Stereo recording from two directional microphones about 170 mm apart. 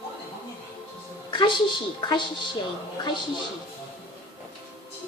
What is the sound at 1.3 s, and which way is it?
Speech, 30° left (ahead or behind).